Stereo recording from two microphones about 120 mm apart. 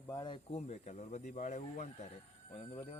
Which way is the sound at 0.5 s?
65° left (ahead or behind).